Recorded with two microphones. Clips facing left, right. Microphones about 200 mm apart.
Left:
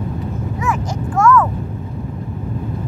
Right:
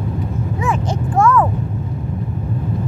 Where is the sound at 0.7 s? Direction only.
30° right (ahead or behind).